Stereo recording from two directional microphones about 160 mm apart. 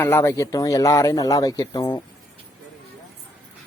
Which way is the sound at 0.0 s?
15° left (ahead or behind).